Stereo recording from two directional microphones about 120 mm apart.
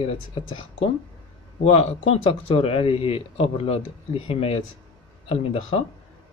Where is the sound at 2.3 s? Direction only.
55° left (ahead or behind).